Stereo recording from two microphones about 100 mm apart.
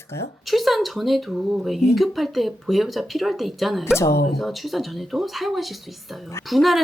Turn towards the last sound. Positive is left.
turn(degrees=0)  # may be behind; listen again after turning